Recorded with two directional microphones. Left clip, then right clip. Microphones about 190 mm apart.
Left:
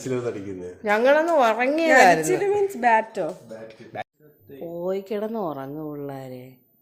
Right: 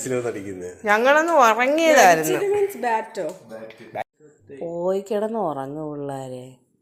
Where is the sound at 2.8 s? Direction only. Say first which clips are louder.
Left 4 dB; 40° left (ahead or behind).